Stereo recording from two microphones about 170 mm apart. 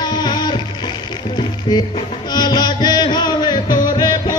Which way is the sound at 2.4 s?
25° left (ahead or behind).